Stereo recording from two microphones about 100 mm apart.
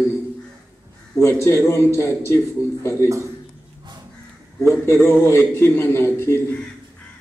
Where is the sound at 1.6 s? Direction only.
25° left (ahead or behind).